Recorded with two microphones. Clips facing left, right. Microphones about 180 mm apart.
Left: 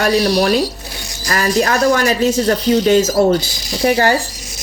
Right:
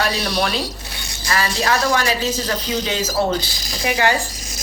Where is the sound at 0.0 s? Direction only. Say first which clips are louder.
Left 7 dB; 50° left (ahead or behind).